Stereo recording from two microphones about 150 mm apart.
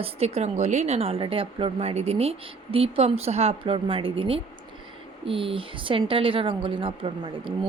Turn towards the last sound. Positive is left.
turn(degrees=-35)  # may be behind; listen again after turning